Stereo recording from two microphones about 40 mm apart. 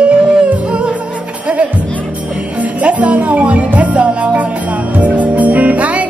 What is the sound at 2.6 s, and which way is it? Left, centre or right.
Music, right.